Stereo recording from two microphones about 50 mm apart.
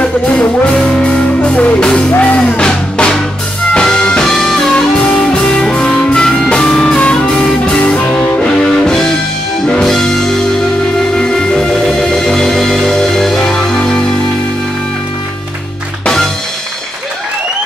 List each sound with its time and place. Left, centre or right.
0.0 s music: left
2.1 s music: left
2.4 s music: centre
5.0 s music: centre